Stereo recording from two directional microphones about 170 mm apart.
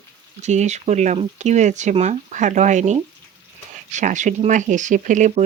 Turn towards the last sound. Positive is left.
turn(degrees=-45)  # may be behind; listen again after turning